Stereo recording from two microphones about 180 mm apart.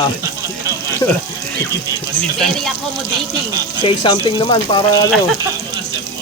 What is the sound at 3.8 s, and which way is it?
Speech, 25° left (ahead or behind).